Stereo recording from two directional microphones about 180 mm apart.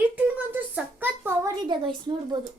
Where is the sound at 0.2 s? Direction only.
10° right (ahead or behind).